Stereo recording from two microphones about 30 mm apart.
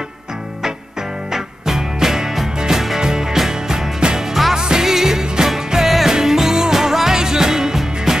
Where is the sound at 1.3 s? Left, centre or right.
Centre.